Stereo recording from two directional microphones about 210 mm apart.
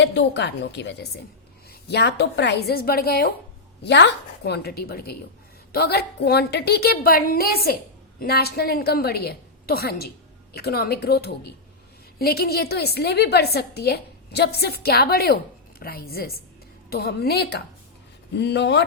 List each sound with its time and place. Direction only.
0.0 s a woman's voice: 55° left (ahead or behind)